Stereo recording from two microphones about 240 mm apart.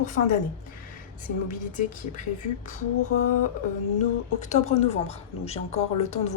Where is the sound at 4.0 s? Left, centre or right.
Left.